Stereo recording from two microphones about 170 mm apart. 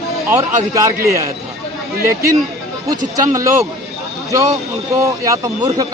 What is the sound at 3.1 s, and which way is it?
A man's voice, 20° right (ahead or behind).